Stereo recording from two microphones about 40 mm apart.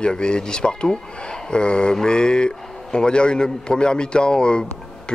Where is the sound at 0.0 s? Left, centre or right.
Left.